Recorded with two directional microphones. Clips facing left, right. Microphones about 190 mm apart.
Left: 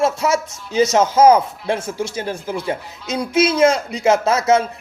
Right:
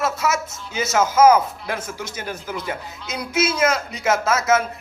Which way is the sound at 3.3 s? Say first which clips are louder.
Left 6 dB; 30° left (ahead or behind).